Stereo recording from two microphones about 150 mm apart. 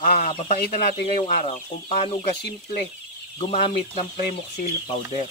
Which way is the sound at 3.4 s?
45° left (ahead or behind).